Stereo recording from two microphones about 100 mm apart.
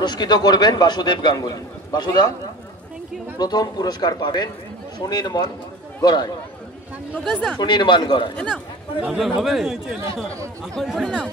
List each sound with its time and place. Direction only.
0.0 s a man's voice: 45° left (ahead or behind)
3.3 s a man's voice: 45° left (ahead or behind)
7.2 s speech: 10° left (ahead or behind)
7.5 s a man's voice: 50° left (ahead or behind)
9.0 s speech: 5° right (ahead or behind)